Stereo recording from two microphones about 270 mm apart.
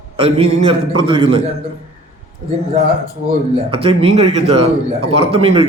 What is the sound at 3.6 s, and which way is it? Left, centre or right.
A man's voice, centre.